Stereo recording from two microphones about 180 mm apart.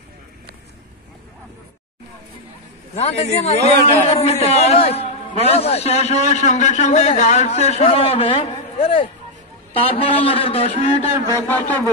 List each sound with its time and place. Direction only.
3.0 s a man's voice: 35° left (ahead or behind)
11.3 s a man's voice: 10° left (ahead or behind)